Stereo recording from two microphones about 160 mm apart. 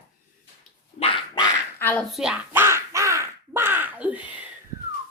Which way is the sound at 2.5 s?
15° right (ahead or behind).